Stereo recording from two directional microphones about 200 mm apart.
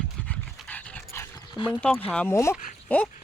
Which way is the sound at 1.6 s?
20° left (ahead or behind).